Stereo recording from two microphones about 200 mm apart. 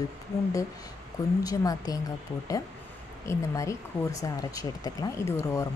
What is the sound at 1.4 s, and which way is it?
Speech, 15° left (ahead or behind).